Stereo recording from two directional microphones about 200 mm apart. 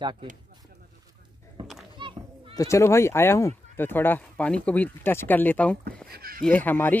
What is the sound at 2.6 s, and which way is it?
Speech, 15° left (ahead or behind).